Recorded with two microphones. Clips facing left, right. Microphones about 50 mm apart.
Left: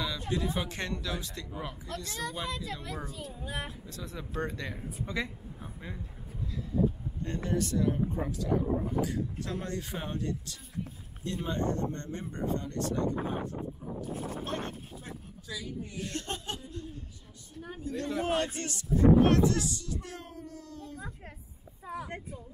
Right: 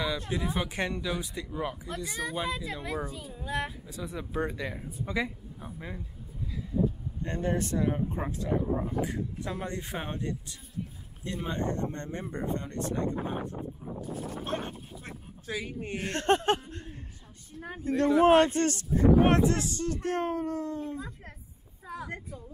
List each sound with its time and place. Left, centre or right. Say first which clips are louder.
0.3 s speech: right 1 dB; centre
7.2 s speech: right 2 dB; right
14.4 s speech: right 3 dB; right
15.0 s speech: right 5 dB; right
19.2 s speech: right 1 dB; right
21.8 s speech: even; right